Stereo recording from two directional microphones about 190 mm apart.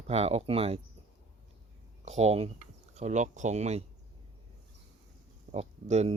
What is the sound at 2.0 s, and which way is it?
Speech, 35° right (ahead or behind).